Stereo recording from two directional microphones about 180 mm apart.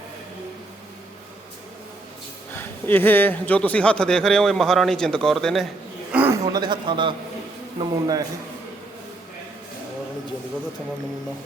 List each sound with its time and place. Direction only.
2.6 s speech: 10° left (ahead or behind)
6.1 s a man's voice: 10° right (ahead or behind)